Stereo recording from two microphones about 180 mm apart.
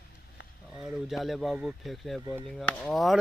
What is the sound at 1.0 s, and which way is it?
Speech, centre (ahead or behind).